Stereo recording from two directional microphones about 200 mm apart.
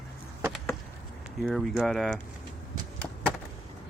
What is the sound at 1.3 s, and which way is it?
Speech, centre (ahead or behind).